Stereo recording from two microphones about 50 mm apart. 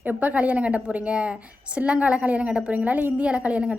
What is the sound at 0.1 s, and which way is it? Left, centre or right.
A woman's voice, right.